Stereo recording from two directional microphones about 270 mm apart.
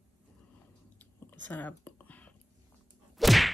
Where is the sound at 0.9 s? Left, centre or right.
Centre.